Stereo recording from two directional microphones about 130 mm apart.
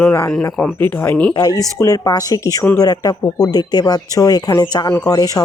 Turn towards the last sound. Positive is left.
turn(degrees=30)  # may be behind; listen again after turning